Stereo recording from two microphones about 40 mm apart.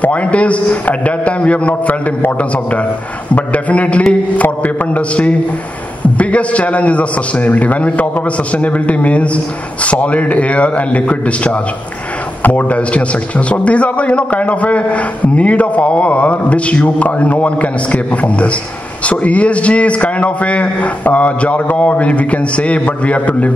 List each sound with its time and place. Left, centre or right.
0.0 s a man's voice: left
3.3 s a man's voice: left